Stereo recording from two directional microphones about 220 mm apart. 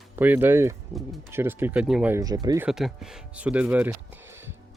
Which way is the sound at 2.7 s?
Centre (ahead or behind).